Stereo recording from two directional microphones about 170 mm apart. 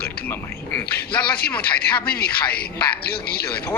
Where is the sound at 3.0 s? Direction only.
65° left (ahead or behind).